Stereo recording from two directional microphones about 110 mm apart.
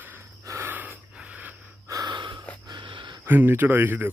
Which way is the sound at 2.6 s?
45° right (ahead or behind).